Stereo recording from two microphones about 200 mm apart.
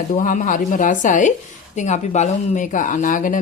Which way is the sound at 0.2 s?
40° left (ahead or behind).